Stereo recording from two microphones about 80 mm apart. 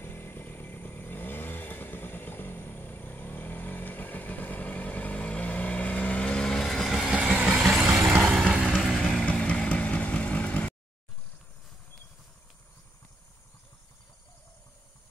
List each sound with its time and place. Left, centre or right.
0.0 s vehicle: left; by 7.1 s centre
7.1 s vehicle: centre
7.5 s vehicle: centre
8.3 s music: centre
8.7 s vehicle: centre